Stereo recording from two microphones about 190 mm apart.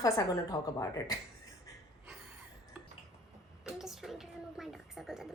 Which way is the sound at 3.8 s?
Centre (ahead or behind).